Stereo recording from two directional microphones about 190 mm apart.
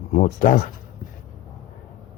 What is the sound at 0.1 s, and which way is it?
Speech, 40° left (ahead or behind).